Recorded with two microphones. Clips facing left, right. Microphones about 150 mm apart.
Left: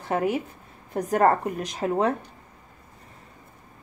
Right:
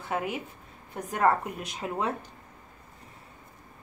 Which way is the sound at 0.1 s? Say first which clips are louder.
Left 7 dB; 40° left (ahead or behind).